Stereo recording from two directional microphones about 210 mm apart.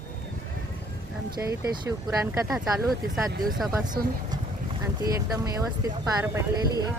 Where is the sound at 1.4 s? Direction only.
15° right (ahead or behind).